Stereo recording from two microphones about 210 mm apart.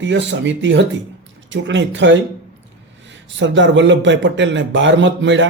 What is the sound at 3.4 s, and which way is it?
Speech, 60° right (ahead or behind).